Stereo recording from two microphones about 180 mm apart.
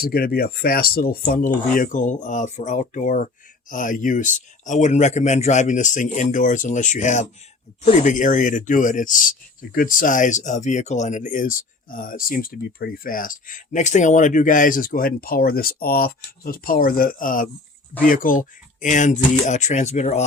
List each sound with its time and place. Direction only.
0.0 s speech: 55° left (ahead or behind); by 20.2 s 40° left (ahead or behind)